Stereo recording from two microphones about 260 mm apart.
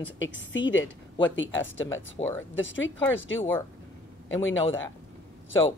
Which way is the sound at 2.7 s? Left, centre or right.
Left.